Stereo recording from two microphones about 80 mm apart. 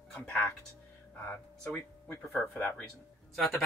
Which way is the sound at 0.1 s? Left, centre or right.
Left.